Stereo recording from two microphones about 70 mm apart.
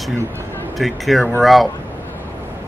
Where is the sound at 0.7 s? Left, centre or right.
Centre.